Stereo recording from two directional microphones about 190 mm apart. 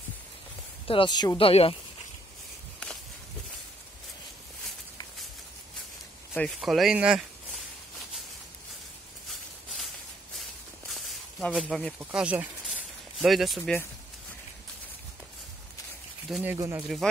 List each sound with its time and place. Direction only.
0.8 s speech: 25° left (ahead or behind)
6.3 s speech: 5° left (ahead or behind)
10.9 s snake: centre (ahead or behind)
12.0 s speech: 5° right (ahead or behind)
16.3 s speech: centre (ahead or behind)
16.5 s speech: 15° right (ahead or behind)
16.8 s speech: centre (ahead or behind)